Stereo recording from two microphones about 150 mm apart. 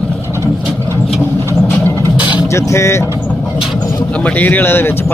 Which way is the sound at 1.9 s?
15° left (ahead or behind).